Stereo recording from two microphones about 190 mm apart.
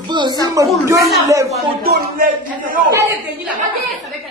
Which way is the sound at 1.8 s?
50° right (ahead or behind).